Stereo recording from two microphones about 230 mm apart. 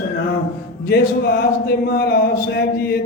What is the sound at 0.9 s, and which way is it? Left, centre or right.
Speech, left.